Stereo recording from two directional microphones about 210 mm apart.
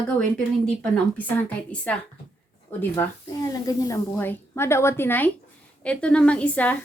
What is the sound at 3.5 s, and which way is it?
A woman's voice, 15° left (ahead or behind).